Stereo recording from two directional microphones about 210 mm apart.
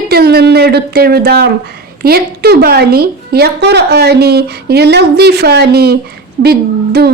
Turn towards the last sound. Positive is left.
turn(degrees=-50)  # may be behind; listen again after turning